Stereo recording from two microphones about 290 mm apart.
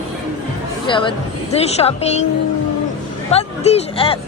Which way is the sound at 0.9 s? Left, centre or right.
Centre.